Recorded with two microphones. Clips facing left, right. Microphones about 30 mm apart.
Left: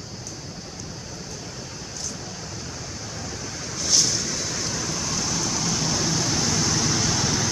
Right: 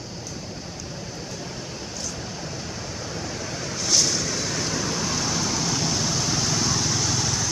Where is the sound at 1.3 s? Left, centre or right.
Right.